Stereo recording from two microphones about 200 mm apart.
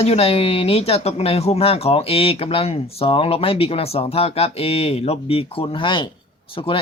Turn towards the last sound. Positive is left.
turn(degrees=25)  # may be behind; listen again after turning